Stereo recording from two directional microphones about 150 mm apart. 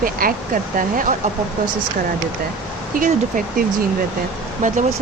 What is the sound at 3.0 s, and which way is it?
Speech, 65° right (ahead or behind).